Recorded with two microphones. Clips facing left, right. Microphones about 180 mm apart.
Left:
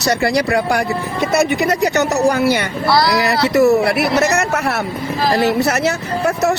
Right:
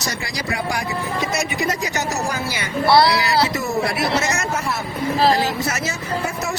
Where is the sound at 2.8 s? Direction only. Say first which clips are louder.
Right 2 dB; 25° right (ahead or behind).